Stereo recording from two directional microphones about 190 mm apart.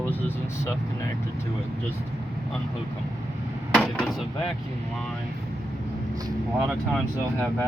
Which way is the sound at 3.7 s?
Centre (ahead or behind).